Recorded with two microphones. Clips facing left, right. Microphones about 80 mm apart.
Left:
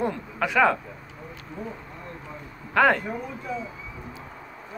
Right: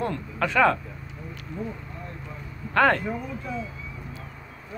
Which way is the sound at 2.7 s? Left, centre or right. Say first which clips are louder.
Left 1 dB; centre.